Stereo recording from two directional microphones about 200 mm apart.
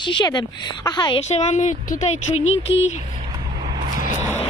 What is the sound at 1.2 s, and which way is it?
Speech, 35° left (ahead or behind).